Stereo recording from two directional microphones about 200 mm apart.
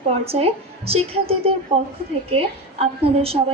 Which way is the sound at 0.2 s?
30° right (ahead or behind).